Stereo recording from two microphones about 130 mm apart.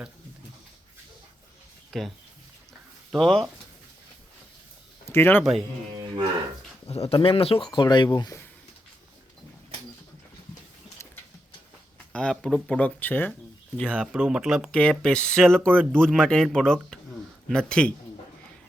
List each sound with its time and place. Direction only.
1.9 s speech: centre (ahead or behind)
5.0 s speech: 20° left (ahead or behind)
5.4 s speech: centre (ahead or behind)
6.8 s speech: 50° left (ahead or behind); by 8.4 s 30° left (ahead or behind)
11.0 s a sound: 20° left (ahead or behind)
12.1 s speech: 5° left (ahead or behind)
14.0 s speech: 5° right (ahead or behind)
14.7 s speech: 10° left (ahead or behind)